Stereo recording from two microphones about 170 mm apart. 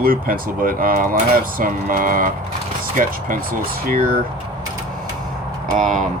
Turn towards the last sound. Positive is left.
turn(degrees=-50)  # may be behind; listen again after turning